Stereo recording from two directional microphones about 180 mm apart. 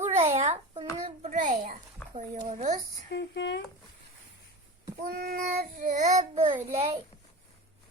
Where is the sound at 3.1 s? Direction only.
75° left (ahead or behind).